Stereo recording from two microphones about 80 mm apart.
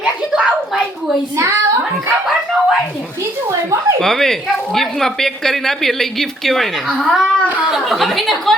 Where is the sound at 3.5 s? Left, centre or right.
Right.